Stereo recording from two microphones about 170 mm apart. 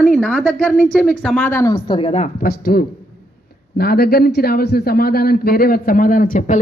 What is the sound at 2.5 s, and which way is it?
Speech, 65° left (ahead or behind).